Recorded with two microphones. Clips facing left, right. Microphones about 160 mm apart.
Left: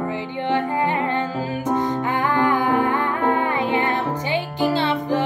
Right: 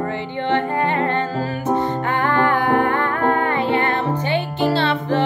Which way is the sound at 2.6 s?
60° right (ahead or behind).